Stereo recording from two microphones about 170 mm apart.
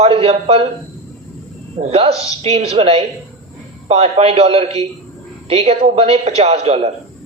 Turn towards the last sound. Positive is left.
turn(degrees=-40)  # may be behind; listen again after turning